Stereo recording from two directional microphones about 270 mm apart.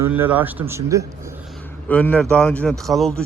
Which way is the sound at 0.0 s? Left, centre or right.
Centre.